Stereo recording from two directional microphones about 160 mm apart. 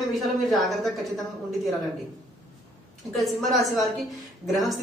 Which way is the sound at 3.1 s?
Centre (ahead or behind).